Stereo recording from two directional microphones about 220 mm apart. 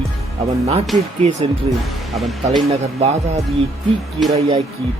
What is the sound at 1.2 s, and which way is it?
Speech, 30° right (ahead or behind).